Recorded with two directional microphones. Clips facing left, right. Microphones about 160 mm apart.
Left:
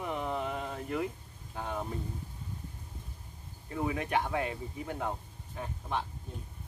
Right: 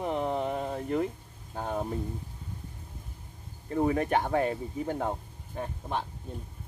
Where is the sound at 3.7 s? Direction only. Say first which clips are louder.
Right 6 dB; 40° right (ahead or behind).